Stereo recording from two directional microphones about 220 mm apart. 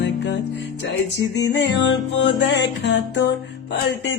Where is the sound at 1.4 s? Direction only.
50° left (ahead or behind).